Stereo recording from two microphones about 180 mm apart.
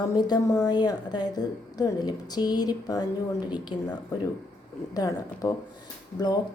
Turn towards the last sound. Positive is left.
turn(degrees=20)  # may be behind; listen again after turning